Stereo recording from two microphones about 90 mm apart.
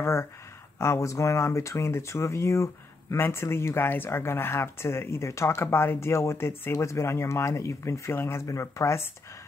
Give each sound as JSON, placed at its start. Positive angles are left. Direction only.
{"t": 0.0, "sound": "speech", "side_deg": 30}